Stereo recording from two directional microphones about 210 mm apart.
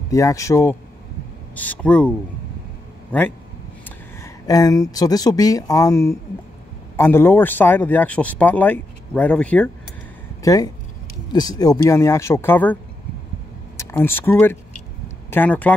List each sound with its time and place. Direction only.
0.1 s speech: 15° left (ahead or behind)
10.4 s speech: 15° left (ahead or behind)
13.7 s speech: 10° left (ahead or behind)